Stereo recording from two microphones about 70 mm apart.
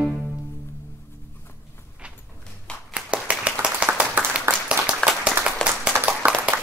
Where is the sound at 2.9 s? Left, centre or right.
Centre.